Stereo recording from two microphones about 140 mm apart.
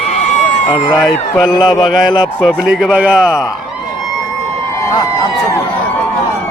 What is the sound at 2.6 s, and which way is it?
Speech, 5° right (ahead or behind).